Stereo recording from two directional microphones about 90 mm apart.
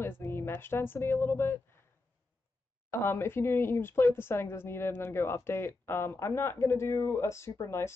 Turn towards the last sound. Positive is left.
turn(degrees=30)  # may be behind; listen again after turning